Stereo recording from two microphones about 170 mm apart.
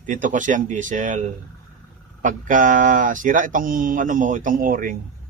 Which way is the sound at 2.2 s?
50° right (ahead or behind).